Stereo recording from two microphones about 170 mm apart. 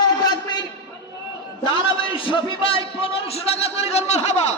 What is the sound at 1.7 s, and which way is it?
A man's voice, 30° left (ahead or behind).